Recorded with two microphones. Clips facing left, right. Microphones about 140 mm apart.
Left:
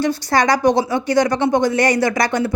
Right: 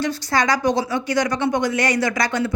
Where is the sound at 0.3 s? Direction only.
35° left (ahead or behind).